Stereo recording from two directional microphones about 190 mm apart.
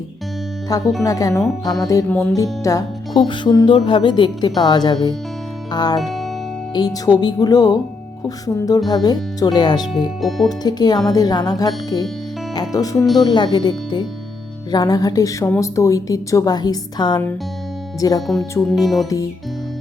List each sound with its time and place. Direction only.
0.7 s speech: 20° left (ahead or behind)
6.0 s speech: centre (ahead or behind)
6.7 s speech: 20° left (ahead or behind)
10.2 s speech: centre (ahead or behind)
10.6 s speech: 20° left (ahead or behind)
18.6 s speech: centre (ahead or behind)